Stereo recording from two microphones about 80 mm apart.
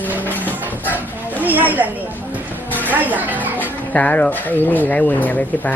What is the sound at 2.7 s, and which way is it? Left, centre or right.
Music, left.